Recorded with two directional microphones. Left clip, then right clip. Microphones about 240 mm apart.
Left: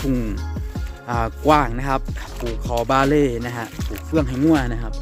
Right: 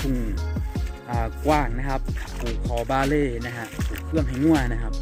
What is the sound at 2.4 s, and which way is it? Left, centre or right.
Speech, centre.